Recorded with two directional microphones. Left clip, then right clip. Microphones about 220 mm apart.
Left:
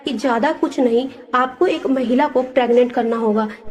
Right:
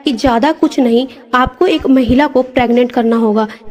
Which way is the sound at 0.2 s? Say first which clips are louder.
Right 5 dB; 55° right (ahead or behind).